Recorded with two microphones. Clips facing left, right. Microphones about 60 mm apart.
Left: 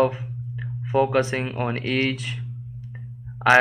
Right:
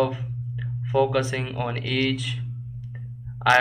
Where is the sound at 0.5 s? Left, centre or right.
Left.